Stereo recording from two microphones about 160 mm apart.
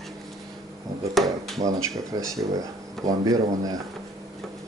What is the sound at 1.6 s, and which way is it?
Speech, 20° right (ahead or behind).